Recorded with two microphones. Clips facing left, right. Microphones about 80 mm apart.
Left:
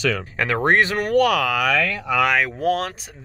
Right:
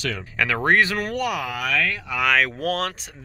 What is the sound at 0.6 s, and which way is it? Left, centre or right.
Speech, left.